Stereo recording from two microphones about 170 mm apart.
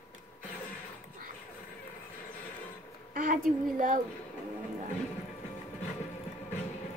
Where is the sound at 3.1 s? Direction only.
50° right (ahead or behind).